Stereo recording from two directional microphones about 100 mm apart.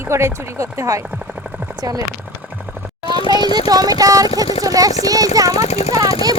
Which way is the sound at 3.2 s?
50° left (ahead or behind).